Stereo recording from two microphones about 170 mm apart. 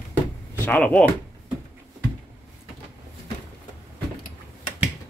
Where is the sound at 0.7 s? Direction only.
5° left (ahead or behind).